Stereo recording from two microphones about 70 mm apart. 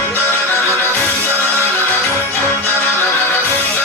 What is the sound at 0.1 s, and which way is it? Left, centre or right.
Music, left.